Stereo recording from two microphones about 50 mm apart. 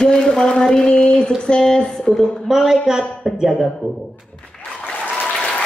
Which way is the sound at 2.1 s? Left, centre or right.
Centre.